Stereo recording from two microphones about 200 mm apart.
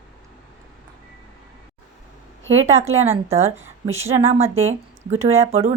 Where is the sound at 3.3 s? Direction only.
30° right (ahead or behind).